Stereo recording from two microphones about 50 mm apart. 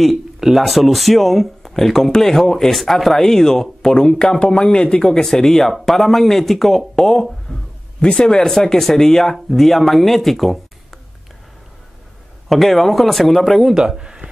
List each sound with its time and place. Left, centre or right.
0.0 s speech: centre
12.4 s speech: centre
13.7 s speech: centre